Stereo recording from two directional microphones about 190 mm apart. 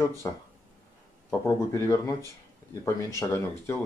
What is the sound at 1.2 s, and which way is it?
Speech, 15° left (ahead or behind).